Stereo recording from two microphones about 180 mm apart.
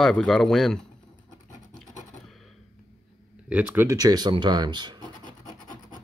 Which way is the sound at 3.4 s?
10° right (ahead or behind).